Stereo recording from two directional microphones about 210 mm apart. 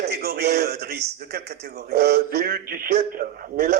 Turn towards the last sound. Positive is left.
turn(degrees=-45)  # may be behind; listen again after turning